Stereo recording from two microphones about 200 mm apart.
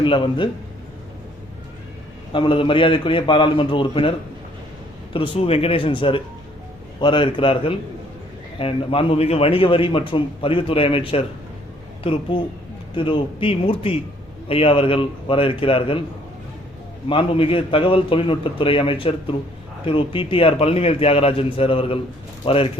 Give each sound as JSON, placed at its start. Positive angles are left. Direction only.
{"t": 0.0, "sound": "a man's voice", "side_deg": 25}
{"t": 2.3, "sound": "a man's voice", "side_deg": 25}
{"t": 5.1, "sound": "a man's voice", "side_deg": 25}
{"t": 17.1, "sound": "a man's voice", "side_deg": 25}